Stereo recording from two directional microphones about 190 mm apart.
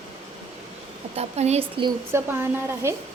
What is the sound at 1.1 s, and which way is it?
Speech, 35° right (ahead or behind).